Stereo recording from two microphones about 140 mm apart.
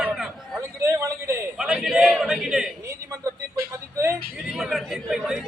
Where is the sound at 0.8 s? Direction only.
20° right (ahead or behind).